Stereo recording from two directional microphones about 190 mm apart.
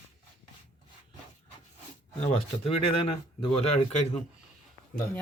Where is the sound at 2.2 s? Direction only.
30° left (ahead or behind).